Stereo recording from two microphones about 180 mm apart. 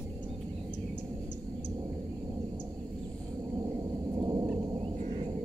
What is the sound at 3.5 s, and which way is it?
Thunder, 20° right (ahead or behind).